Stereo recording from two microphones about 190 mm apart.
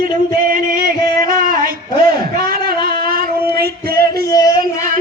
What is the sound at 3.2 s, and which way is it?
Female singing, 55° right (ahead or behind).